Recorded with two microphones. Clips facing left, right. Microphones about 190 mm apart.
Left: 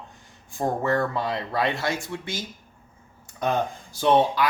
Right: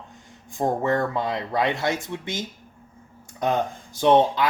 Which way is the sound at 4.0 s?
20° right (ahead or behind).